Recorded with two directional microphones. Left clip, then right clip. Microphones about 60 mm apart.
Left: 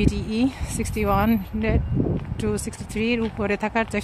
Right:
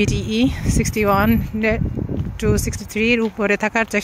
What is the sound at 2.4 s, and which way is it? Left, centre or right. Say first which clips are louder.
Speech: right 8 dB; right.